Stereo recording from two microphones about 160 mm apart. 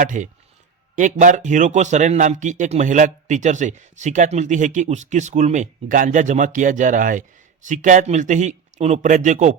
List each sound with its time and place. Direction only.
0.0 s a man's voice: 55° right (ahead or behind)